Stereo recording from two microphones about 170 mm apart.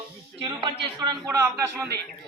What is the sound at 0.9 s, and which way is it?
Speech, 20° right (ahead or behind).